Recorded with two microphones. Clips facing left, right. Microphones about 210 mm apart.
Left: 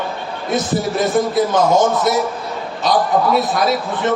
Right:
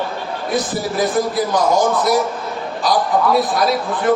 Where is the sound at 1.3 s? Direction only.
25° left (ahead or behind).